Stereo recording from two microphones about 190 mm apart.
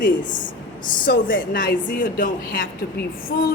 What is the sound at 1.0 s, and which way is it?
A woman's voice, 45° left (ahead or behind).